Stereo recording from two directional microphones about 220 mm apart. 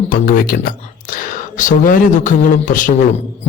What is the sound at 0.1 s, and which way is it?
A man's voice, 40° left (ahead or behind).